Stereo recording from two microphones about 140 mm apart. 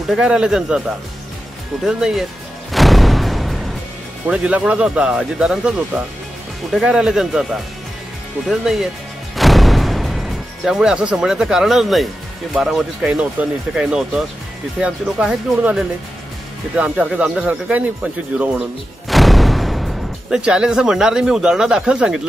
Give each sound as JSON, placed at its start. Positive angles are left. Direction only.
{"t": 0.1, "sound": "speech", "side_deg": -5}
{"t": 2.7, "sound": "music", "side_deg": 0}
{"t": 4.3, "sound": "speech", "side_deg": -10}
{"t": 8.5, "sound": "speech", "side_deg": 0}
{"t": 9.4, "sound": "music", "side_deg": 0}
{"t": 12.5, "sound": "speech", "side_deg": 0}